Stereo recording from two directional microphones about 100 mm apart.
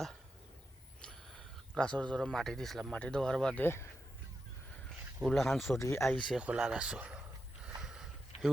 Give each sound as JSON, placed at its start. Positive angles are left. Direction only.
{"t": 1.0, "sound": "speech", "side_deg": 5}
{"t": 3.6, "sound": "speech", "side_deg": 25}
{"t": 5.2, "sound": "speech", "side_deg": 0}
{"t": 5.8, "sound": "speech", "side_deg": 25}
{"t": 6.3, "sound": "a sound", "side_deg": -10}